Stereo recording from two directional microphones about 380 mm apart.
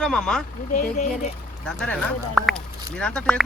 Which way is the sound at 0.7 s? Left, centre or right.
Left.